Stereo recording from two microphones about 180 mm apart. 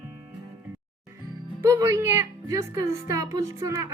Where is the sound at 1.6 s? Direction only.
15° right (ahead or behind).